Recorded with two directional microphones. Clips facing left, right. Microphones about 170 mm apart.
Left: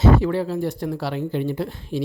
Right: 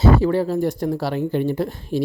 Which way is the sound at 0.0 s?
40° right (ahead or behind).